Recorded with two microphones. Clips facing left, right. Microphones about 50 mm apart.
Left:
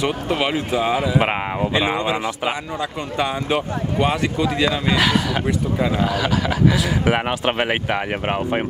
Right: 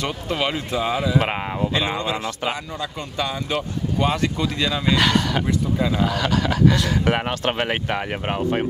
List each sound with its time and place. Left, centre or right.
0.0 s speech: centre
4.9 s speech: centre